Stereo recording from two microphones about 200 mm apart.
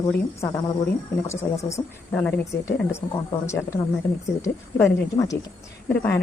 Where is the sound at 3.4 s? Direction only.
15° left (ahead or behind).